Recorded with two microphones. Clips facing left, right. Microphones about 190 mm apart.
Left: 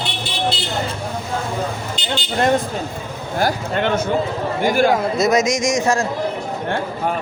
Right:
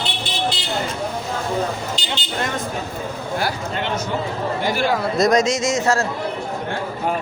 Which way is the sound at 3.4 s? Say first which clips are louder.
Left 8 dB; 55° left (ahead or behind).